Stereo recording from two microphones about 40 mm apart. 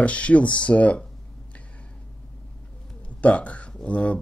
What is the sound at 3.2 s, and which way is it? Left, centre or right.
Speech, left.